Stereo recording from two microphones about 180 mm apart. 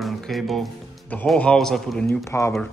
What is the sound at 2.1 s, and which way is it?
Speech, 15° left (ahead or behind).